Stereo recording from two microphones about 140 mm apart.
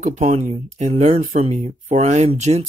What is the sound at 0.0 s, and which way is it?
Speech, 55° right (ahead or behind).